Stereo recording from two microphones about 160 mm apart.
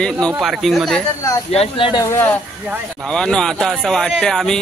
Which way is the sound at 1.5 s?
35° left (ahead or behind).